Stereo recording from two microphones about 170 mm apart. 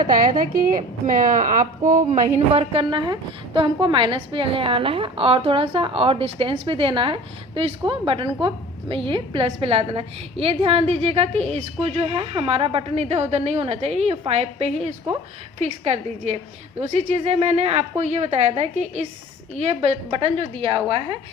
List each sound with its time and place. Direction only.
0.1 s a woman's voice: 55° right (ahead or behind)
2.5 s a woman's voice: 35° right (ahead or behind)